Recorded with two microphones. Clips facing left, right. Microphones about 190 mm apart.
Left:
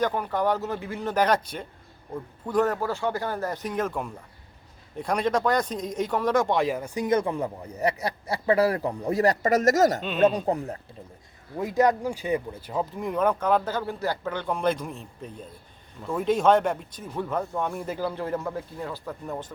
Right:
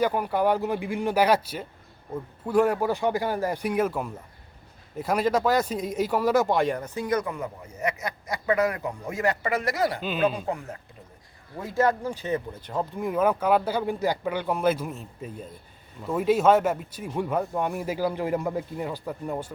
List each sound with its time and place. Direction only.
0.0 s speech: 10° right (ahead or behind); by 10.8 s 35° left (ahead or behind)
11.5 s speech: 15° left (ahead or behind); by 19.5 s 10° right (ahead or behind)